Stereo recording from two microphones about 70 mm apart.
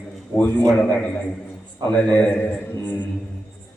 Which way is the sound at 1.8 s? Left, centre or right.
Centre.